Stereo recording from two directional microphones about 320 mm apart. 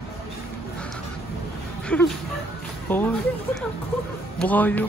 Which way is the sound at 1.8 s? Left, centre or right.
Centre.